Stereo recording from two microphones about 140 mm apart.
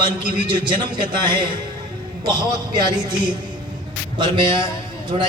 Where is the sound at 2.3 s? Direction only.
30° right (ahead or behind).